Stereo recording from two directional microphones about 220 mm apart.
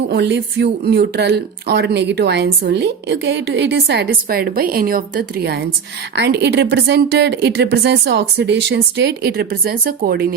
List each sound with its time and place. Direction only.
0.1 s speech: 50° right (ahead or behind)